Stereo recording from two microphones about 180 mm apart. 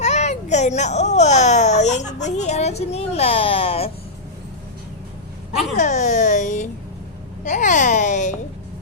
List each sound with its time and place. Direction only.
0.0 s a child's voice: 40° left (ahead or behind)
5.7 s speech: 45° left (ahead or behind)